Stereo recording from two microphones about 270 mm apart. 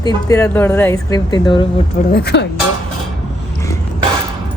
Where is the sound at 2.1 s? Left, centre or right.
Left.